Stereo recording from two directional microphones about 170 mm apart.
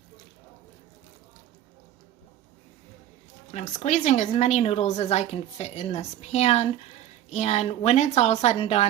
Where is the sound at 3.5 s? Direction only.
45° left (ahead or behind).